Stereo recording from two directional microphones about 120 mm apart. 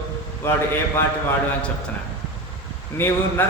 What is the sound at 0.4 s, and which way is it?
Speech, 20° left (ahead or behind).